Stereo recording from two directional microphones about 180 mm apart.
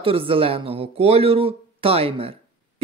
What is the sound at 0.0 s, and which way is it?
Speech, 30° right (ahead or behind).